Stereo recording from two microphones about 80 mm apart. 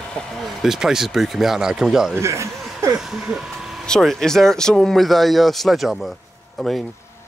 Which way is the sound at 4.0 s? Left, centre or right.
Centre.